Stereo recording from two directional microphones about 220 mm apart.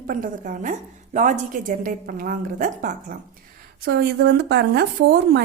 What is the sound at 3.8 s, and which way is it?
Speech, 45° right (ahead or behind).